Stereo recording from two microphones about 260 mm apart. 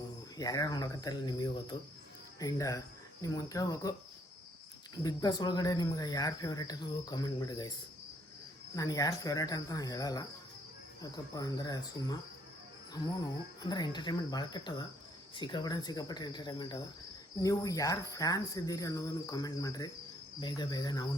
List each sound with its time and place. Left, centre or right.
0.3 s speech: centre
5.0 s speech: centre
8.7 s speech: centre
13.6 s speech: centre